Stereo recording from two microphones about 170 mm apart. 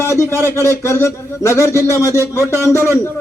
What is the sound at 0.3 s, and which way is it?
Speech, 15° right (ahead or behind).